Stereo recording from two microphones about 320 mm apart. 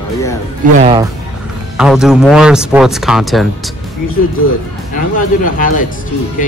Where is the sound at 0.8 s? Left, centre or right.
Centre.